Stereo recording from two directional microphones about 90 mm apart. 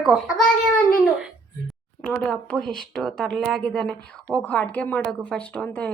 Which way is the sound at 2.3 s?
10° left (ahead or behind).